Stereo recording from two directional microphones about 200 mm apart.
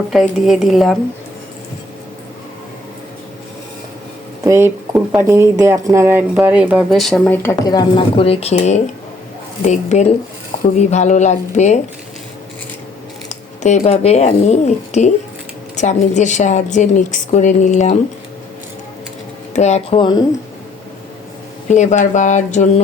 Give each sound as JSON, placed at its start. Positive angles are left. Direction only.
{"t": 0.1, "sound": "a woman's voice", "side_deg": 0}
{"t": 4.4, "sound": "speech", "side_deg": -15}
{"t": 7.6, "sound": "a woman's voice", "side_deg": 20}
{"t": 13.2, "sound": "a woman's voice", "side_deg": 35}
{"t": 19.5, "sound": "speech", "side_deg": 35}
{"t": 21.7, "sound": "a woman's voice", "side_deg": 35}